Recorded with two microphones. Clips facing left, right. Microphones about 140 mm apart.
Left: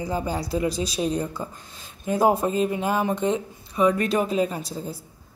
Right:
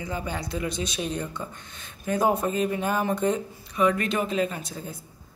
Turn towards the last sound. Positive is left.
turn(degrees=5)  # may be behind; listen again after turning